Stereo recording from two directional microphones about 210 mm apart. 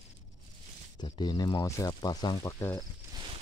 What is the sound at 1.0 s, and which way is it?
Speech, 20° left (ahead or behind).